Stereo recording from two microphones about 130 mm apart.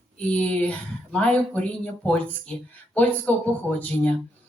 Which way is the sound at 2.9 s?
10° left (ahead or behind).